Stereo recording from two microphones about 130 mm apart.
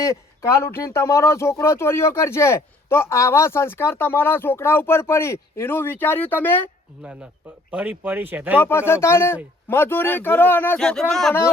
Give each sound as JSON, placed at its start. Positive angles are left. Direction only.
{"t": 0.0, "sound": "speech", "side_deg": 25}
{"t": 7.0, "sound": "speech", "side_deg": -10}
{"t": 8.5, "sound": "speech", "side_deg": 15}
{"t": 10.8, "sound": "speech", "side_deg": 5}